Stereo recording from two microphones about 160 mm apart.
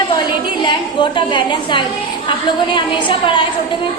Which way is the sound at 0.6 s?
30° left (ahead or behind).